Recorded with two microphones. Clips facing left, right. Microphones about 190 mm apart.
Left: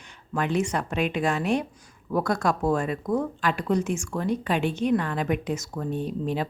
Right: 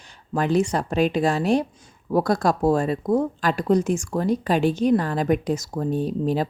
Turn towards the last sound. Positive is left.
turn(degrees=-35)  # may be behind; listen again after turning